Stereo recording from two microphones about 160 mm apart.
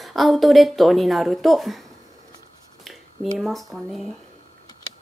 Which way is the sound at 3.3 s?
Centre (ahead or behind).